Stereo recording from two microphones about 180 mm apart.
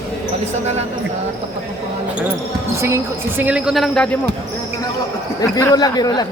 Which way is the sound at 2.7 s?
15° right (ahead or behind).